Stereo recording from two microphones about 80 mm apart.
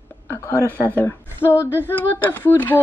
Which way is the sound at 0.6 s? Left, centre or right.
Right.